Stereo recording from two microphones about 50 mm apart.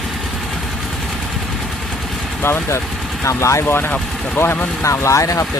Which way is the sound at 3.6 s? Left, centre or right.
Left.